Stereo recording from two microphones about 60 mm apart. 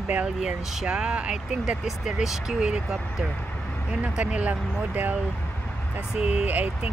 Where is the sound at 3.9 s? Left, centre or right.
Right.